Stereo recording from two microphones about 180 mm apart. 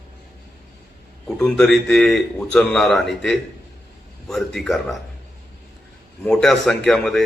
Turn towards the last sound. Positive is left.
turn(degrees=0)  # may be behind; listen again after turning